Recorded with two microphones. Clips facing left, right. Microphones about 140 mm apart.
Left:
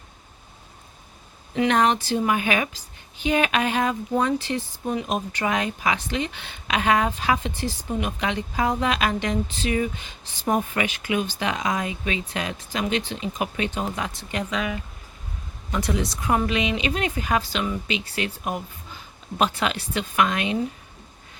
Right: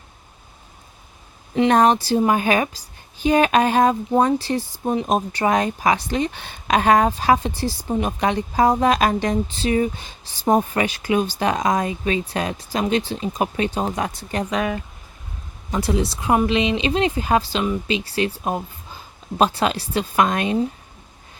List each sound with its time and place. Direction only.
1.5 s a woman's voice: 35° right (ahead or behind)
15.7 s a woman's voice: 30° right (ahead or behind)